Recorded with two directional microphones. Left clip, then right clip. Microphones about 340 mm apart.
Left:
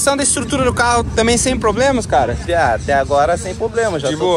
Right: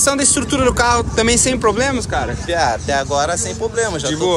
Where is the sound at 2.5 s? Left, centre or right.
Left.